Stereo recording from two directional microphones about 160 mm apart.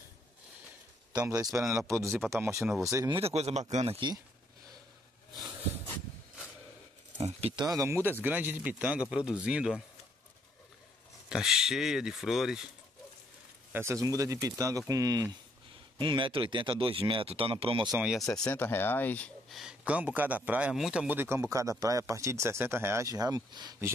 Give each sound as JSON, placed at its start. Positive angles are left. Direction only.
{"t": 1.1, "sound": "a man's voice", "side_deg": -20}
{"t": 3.2, "sound": "speech", "side_deg": -40}
{"t": 7.2, "sound": "a sound", "side_deg": -40}
{"t": 7.7, "sound": "a man's voice", "side_deg": -15}
{"t": 11.2, "sound": "speech", "side_deg": -5}
{"t": 13.7, "sound": "speech", "side_deg": -15}
{"t": 17.9, "sound": "speech", "side_deg": -5}
{"t": 18.4, "sound": "speech", "side_deg": 15}
{"t": 19.6, "sound": "a man's voice", "side_deg": -5}